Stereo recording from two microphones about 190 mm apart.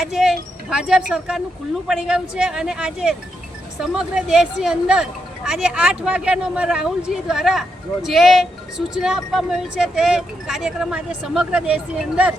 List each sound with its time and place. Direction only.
0.0 s a woman's voice: 5° right (ahead or behind)